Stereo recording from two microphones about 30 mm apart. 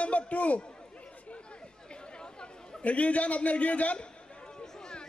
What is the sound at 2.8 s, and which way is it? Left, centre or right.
A man's voice, left.